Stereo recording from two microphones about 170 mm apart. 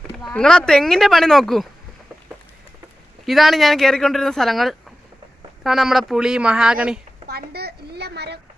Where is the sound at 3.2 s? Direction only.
Centre (ahead or behind).